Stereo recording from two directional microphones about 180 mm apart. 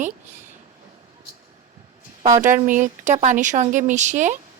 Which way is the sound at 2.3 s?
45° right (ahead or behind).